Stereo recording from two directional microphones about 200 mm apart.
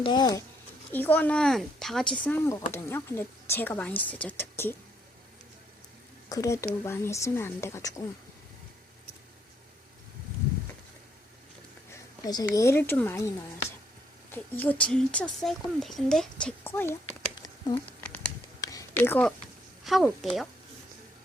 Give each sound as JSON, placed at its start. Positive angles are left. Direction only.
{"t": 0.0, "sound": "speech", "side_deg": 20}
{"t": 0.9, "sound": "speech", "side_deg": 10}
{"t": 6.2, "sound": "a woman's voice", "side_deg": 15}
{"t": 12.2, "sound": "speech", "side_deg": 20}
{"t": 14.3, "sound": "speech", "side_deg": 10}
{"t": 17.3, "sound": "a sound", "side_deg": 20}
{"t": 19.8, "sound": "speech", "side_deg": 0}